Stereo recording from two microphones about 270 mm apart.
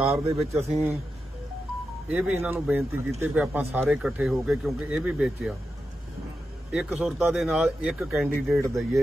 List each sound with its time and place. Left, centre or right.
0.1 s speech: right
2.0 s speech: centre
6.7 s speech: centre